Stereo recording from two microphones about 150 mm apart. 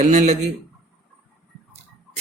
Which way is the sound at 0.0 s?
55° right (ahead or behind).